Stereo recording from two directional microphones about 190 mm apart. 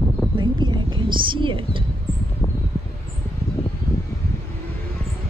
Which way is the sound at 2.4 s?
15° left (ahead or behind).